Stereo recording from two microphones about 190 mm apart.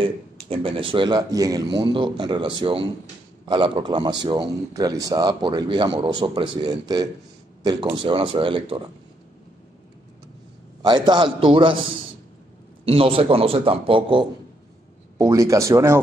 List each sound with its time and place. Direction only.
0.0 s a man's voice: 30° right (ahead or behind)
10.8 s a man's voice: 25° right (ahead or behind)
12.8 s a man's voice: 30° right (ahead or behind)
15.1 s speech: 15° right (ahead or behind)